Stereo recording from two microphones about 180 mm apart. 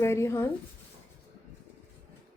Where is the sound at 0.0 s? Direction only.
15° left (ahead or behind).